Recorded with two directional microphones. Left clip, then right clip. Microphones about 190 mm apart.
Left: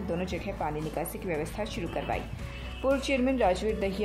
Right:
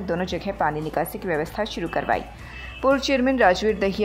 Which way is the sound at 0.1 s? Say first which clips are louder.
Right 8 dB; 15° right (ahead or behind).